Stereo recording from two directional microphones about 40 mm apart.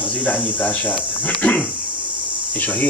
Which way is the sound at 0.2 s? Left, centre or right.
Left.